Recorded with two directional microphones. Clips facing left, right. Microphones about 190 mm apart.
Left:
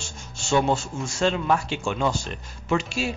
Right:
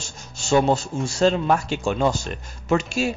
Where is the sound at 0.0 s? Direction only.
40° right (ahead or behind).